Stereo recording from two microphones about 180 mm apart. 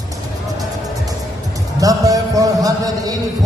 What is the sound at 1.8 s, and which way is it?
Music, 20° right (ahead or behind).